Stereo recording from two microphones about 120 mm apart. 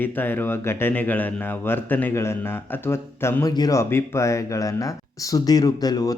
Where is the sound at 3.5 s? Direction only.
30° left (ahead or behind).